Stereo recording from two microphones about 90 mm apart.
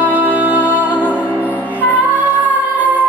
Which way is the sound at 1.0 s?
20° left (ahead or behind).